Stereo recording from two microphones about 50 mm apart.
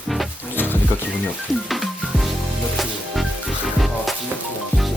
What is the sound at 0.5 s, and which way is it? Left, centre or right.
Music, left.